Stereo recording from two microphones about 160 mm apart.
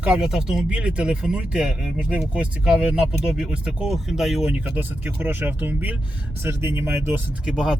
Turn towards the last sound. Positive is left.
turn(degrees=-5)  # may be behind; listen again after turning